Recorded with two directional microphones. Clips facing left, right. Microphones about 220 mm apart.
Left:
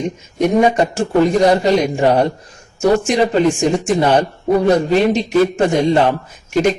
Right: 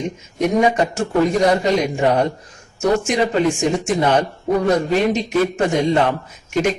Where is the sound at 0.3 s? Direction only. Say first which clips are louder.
Left 3 dB; 30° left (ahead or behind).